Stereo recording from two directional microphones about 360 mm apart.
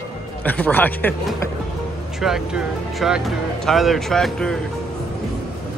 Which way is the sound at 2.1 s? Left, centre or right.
Centre.